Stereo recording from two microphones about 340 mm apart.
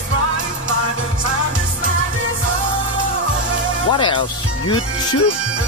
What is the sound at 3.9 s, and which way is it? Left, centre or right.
Speech, centre.